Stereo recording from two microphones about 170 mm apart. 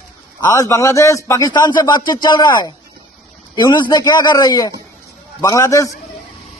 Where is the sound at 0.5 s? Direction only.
20° left (ahead or behind).